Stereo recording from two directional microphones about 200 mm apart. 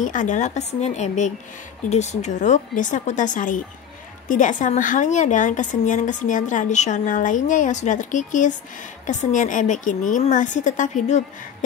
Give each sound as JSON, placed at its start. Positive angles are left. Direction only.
{"t": 0.0, "sound": "a woman's voice", "side_deg": 40}